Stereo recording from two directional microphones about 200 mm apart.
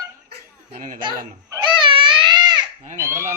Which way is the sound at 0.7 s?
40° right (ahead or behind).